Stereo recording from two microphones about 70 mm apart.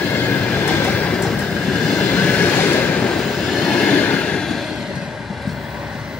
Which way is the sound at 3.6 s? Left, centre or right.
Centre.